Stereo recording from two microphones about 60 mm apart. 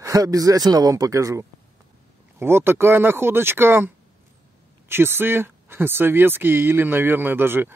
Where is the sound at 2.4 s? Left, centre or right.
Right.